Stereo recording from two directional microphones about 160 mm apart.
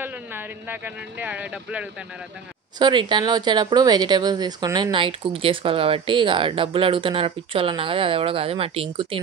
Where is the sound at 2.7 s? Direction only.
30° right (ahead or behind).